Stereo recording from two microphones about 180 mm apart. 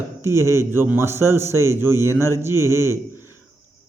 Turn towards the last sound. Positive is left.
turn(degrees=-15)  # may be behind; listen again after turning